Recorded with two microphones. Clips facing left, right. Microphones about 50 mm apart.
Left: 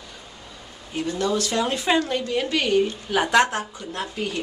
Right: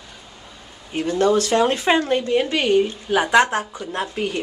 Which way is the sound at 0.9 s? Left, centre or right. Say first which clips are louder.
Right 6 dB; right.